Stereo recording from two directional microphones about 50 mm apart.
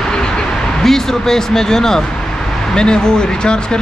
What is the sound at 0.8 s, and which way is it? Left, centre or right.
Speech, centre.